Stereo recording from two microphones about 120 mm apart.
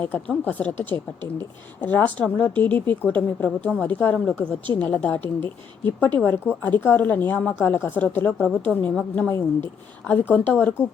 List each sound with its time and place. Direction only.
0.0 s speech: 15° left (ahead or behind)